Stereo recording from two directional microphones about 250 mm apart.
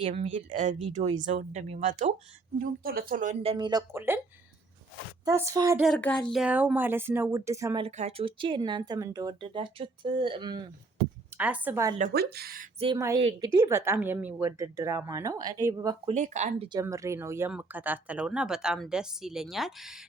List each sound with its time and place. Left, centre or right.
0.0 s speech: right; by 4.2 s centre
5.2 s speech: centre
5.8 s speech: centre
7.9 s speech: right
11.3 s speech: centre
11.9 s speech: right
12.8 s speech: centre
16.1 s speech: right
16.7 s speech: centre